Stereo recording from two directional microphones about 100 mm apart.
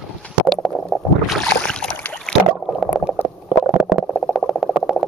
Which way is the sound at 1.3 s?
5° left (ahead or behind).